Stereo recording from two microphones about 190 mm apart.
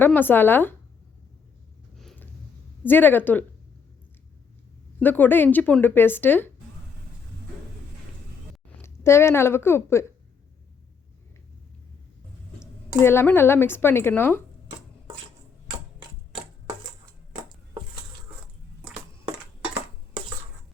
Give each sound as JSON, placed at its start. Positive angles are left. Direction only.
{"t": 0.0, "sound": "speech", "side_deg": 10}
{"t": 2.0, "sound": "a sound", "side_deg": 0}
{"t": 2.8, "sound": "speech", "side_deg": 10}
{"t": 4.9, "sound": "speech", "side_deg": 10}
{"t": 8.8, "sound": "a woman's voice", "side_deg": 15}
{"t": 12.5, "sound": "speech", "side_deg": 10}
{"t": 16.0, "sound": "typewriter", "side_deg": -25}